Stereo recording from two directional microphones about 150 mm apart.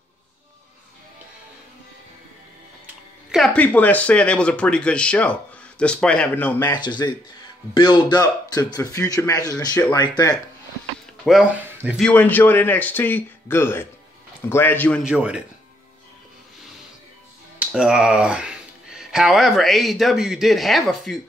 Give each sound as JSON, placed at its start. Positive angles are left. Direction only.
{"t": 3.3, "sound": "speech", "side_deg": 0}
{"t": 6.7, "sound": "speech", "side_deg": 30}
{"t": 11.2, "sound": "speech", "side_deg": 0}
{"t": 12.0, "sound": "speech", "side_deg": 10}
{"t": 15.0, "sound": "speech", "side_deg": -5}
{"t": 17.6, "sound": "speech", "side_deg": -5}